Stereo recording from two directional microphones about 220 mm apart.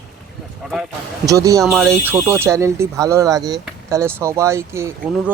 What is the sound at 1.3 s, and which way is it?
Speech, 15° right (ahead or behind).